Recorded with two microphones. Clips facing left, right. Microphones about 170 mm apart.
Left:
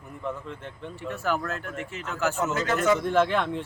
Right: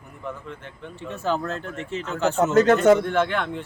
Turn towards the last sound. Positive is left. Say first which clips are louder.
# even
turn(degrees=0)  # may be behind; listen again after turning